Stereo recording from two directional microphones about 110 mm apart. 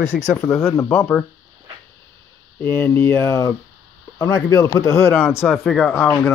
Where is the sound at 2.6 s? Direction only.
20° left (ahead or behind).